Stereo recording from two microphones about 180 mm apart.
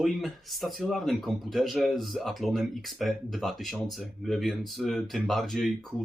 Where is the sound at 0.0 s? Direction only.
Centre (ahead or behind).